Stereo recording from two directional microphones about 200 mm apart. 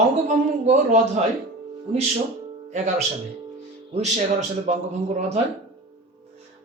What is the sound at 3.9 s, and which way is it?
A man's voice, 35° right (ahead or behind).